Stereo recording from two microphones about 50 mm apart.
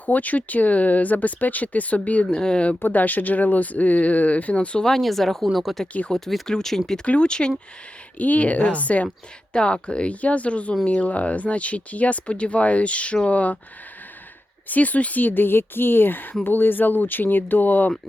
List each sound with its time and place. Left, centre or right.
0.0 s speech: left
2.3 s speech: centre
2.8 s speech: left
4.9 s speech: centre
7.0 s speech: left
8.2 s speech: left
9.5 s speech: centre
14.7 s speech: left